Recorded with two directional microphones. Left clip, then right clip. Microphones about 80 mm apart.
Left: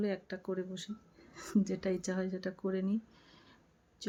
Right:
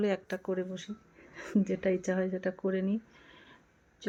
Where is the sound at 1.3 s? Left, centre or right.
Left.